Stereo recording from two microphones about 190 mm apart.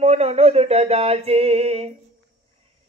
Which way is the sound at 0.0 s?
35° right (ahead or behind).